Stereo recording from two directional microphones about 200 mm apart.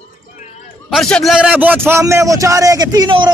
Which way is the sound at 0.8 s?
Centre (ahead or behind).